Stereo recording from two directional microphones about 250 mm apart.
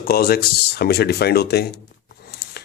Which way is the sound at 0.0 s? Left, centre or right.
Left.